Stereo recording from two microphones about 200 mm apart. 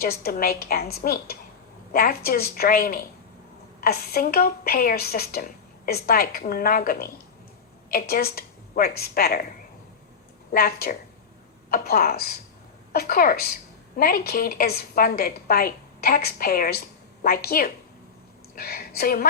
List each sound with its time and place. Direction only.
0.0 s a woman's voice: 50° left (ahead or behind)